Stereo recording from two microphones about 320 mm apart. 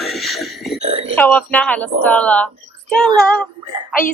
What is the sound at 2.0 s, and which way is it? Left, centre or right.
Child singing, centre.